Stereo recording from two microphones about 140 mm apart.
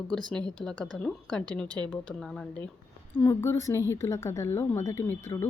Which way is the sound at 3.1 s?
15° left (ahead or behind).